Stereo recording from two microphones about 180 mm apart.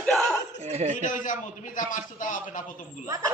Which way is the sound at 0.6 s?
40° right (ahead or behind).